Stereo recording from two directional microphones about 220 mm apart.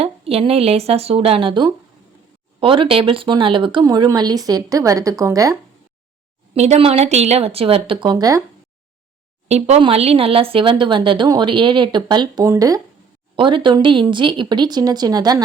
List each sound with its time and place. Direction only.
0.0 s speech: 25° right (ahead or behind)
6.5 s speech: 30° right (ahead or behind)
9.5 s speech: 30° right (ahead or behind)